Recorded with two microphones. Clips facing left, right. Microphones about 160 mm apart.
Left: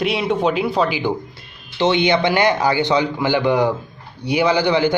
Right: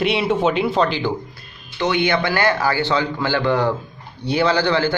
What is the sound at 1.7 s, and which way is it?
A man's voice, 25° left (ahead or behind).